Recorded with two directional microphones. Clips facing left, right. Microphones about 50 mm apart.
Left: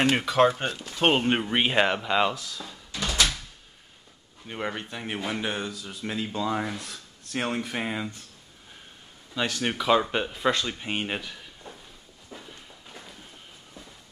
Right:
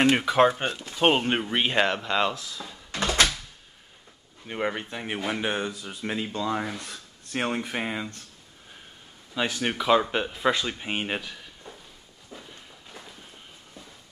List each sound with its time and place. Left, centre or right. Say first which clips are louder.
0.1 s speech: right 1 dB; centre
0.9 s speech: even; centre
2.9 s door: right 3 dB; right
4.5 s speech: right 3 dB; centre
6.3 s speech: even; centre
9.3 s speech: right 1 dB; centre
12.3 s walk: even; centre